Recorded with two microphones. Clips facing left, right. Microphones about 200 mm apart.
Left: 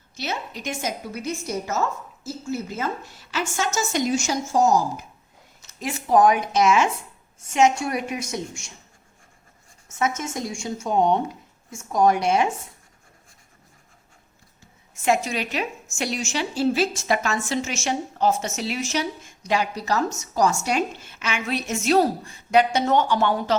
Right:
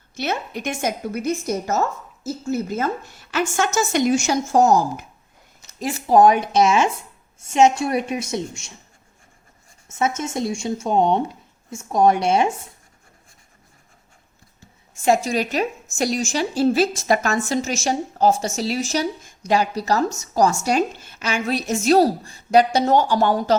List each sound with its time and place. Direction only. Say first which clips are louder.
0.2 s a woman's voice: right 5 dB; 55° right (ahead or behind)
5.8 s a woman's voice: right 3 dB; 35° right (ahead or behind)
10.0 s speech: right 3 dB; 30° right (ahead or behind)
15.0 s a woman's voice: right 4 dB; 35° right (ahead or behind)